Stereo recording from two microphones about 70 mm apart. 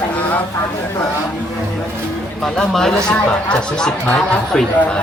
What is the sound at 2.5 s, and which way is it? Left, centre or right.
Speech, centre.